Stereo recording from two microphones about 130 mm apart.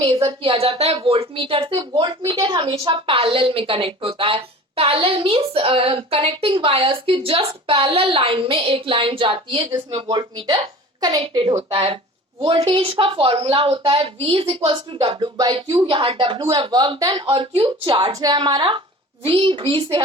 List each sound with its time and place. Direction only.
0.0 s a woman's voice: 40° right (ahead or behind)
11.7 s a woman's voice: 45° right (ahead or behind)